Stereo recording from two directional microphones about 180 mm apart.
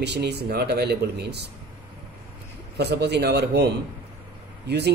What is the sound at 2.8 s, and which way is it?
A man's voice, 65° right (ahead or behind).